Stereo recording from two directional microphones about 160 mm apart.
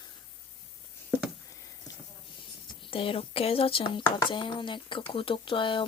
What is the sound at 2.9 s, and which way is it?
Speech, 35° left (ahead or behind).